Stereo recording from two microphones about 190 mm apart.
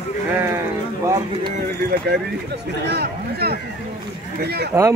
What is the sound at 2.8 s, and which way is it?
Speech, 60° right (ahead or behind).